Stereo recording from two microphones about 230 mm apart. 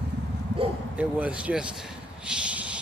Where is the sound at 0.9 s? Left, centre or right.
Centre.